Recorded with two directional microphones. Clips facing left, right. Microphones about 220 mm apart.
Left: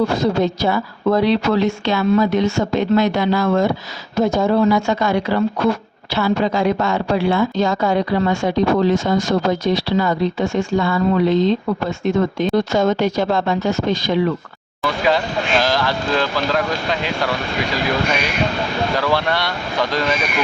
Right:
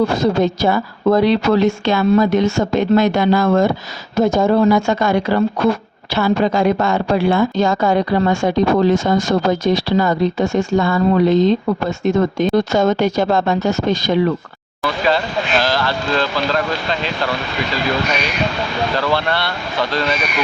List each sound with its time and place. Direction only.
0.2 s a woman's voice: 45° right (ahead or behind)
15.0 s speech: 15° left (ahead or behind)
18.9 s speech: 10° left (ahead or behind)